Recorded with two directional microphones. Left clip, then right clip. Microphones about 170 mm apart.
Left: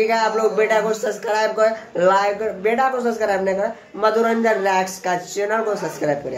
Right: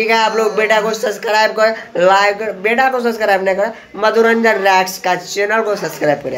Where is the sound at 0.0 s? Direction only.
5° right (ahead or behind).